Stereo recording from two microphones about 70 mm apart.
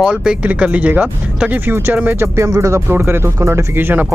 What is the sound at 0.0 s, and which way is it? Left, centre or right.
Speech, centre.